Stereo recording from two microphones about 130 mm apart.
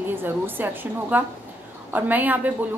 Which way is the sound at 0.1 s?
15° right (ahead or behind).